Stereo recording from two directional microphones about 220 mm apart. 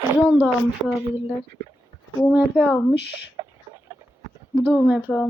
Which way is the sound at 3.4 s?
15° right (ahead or behind).